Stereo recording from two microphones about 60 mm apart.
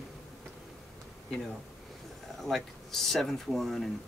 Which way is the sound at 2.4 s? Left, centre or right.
Centre.